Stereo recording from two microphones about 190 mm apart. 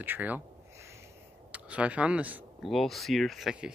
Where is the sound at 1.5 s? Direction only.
5° right (ahead or behind).